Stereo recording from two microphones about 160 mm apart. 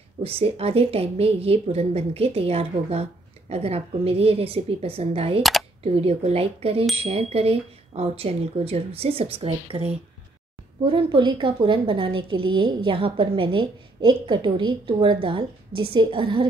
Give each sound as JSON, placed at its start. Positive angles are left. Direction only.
{"t": 0.2, "sound": "a woman's voice", "side_deg": -35}
{"t": 5.4, "sound": "camera", "side_deg": 0}
{"t": 5.9, "sound": "a woman's voice", "side_deg": -40}